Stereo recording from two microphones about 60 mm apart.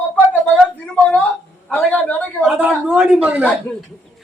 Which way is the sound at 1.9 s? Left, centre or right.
Left.